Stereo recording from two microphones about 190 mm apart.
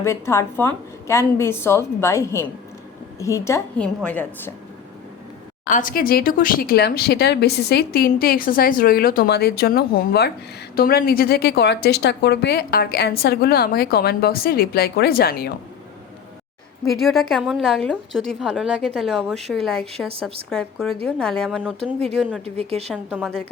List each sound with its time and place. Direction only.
0.0 s a woman's voice: 15° left (ahead or behind)
5.6 s a woman's voice: 45° left (ahead or behind)
16.9 s a woman's voice: centre (ahead or behind)
22.4 s a woman's voice: 35° right (ahead or behind)
23.0 s a woman's voice: 10° right (ahead or behind)